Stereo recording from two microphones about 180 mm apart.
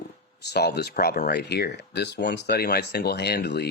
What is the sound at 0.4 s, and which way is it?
Speech, 65° left (ahead or behind).